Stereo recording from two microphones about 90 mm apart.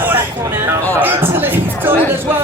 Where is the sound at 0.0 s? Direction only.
20° right (ahead or behind).